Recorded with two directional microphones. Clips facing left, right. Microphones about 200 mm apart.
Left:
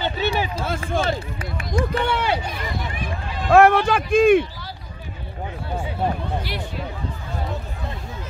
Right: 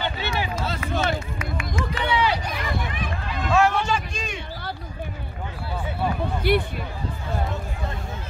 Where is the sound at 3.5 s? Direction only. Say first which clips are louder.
Left 7 dB; 55° left (ahead or behind).